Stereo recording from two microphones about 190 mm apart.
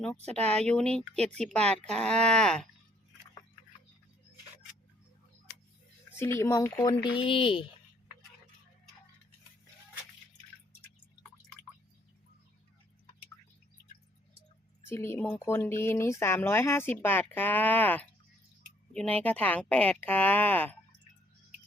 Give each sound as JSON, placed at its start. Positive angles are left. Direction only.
{"t": 0.3, "sound": "speech", "side_deg": 5}
{"t": 5.5, "sound": "tick-tock", "side_deg": 60}
{"t": 6.1, "sound": "speech", "side_deg": 15}
{"t": 7.0, "sound": "speech", "side_deg": 25}
{"t": 14.8, "sound": "speech", "side_deg": 15}